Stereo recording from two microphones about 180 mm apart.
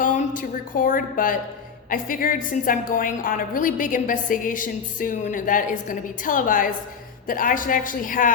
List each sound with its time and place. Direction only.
0.0 s a woman's voice: 45° left (ahead or behind)